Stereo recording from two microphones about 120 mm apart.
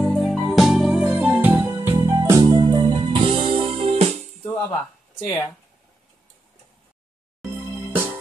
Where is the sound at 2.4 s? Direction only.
35° right (ahead or behind); by 4.1 s 60° right (ahead or behind).